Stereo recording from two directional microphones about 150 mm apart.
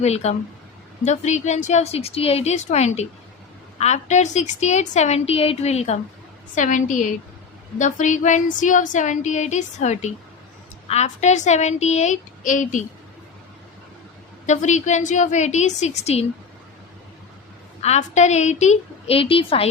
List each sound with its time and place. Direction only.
0.0 s a woman's voice: 45° left (ahead or behind)
6.5 s a woman's voice: 55° left (ahead or behind)
14.4 s a woman's voice: 50° left (ahead or behind)
17.8 s a woman's voice: 50° left (ahead or behind)